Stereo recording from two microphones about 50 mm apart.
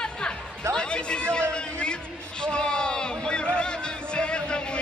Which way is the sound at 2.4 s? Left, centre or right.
Centre.